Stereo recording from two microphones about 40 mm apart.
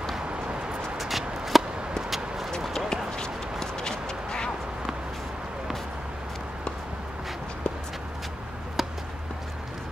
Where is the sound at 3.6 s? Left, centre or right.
Centre.